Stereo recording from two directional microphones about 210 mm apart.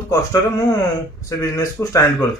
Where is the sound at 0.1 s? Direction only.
15° left (ahead or behind).